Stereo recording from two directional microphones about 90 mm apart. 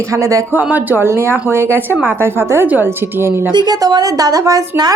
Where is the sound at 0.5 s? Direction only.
20° right (ahead or behind).